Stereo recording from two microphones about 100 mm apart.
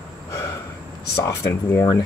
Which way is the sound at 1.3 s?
25° left (ahead or behind).